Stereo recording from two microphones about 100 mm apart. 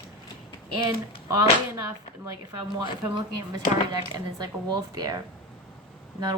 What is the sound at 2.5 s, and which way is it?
Speech, 45° right (ahead or behind).